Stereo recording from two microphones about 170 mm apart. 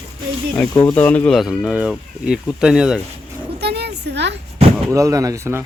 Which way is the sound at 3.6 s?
75° right (ahead or behind).